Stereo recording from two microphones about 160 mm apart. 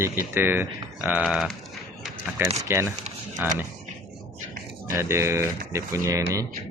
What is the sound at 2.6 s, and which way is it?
Speech, 15° right (ahead or behind).